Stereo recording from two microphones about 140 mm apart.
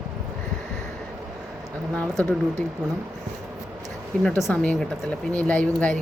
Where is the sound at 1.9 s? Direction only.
10° left (ahead or behind).